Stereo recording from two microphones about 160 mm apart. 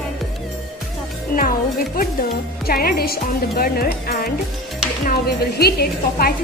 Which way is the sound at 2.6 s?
65° left (ahead or behind).